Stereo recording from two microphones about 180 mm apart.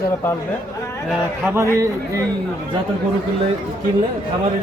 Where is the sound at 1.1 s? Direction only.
10° right (ahead or behind).